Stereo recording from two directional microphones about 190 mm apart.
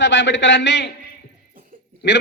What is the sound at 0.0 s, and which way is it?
Speech, 75° left (ahead or behind).